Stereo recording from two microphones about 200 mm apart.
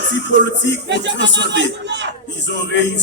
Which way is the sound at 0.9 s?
65° right (ahead or behind).